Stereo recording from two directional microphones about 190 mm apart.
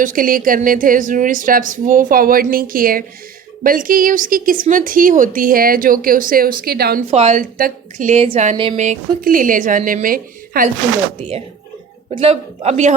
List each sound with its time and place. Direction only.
0.0 s a woman's voice: 45° right (ahead or behind)
7.1 s a man's voice: 35° right (ahead or behind)
8.8 s a woman's voice: 45° right (ahead or behind)
11.2 s a man's voice: 30° right (ahead or behind)